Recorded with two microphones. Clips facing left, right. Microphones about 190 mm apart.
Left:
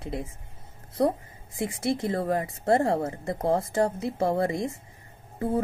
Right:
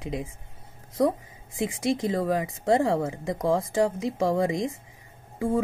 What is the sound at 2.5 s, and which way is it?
Speech, 90° right.